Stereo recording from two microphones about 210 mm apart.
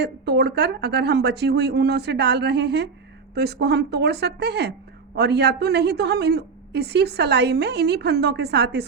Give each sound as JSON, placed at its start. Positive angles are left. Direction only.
{"t": 0.0, "sound": "a woman's voice", "side_deg": -50}